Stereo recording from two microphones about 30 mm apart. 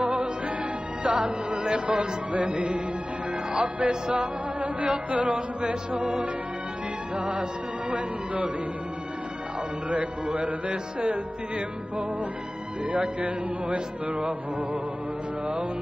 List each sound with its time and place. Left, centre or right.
0.0 s music: right
9.8 s music: right
12.9 s music: right